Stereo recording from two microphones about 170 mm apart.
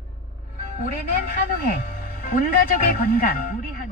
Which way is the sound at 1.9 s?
55° left (ahead or behind).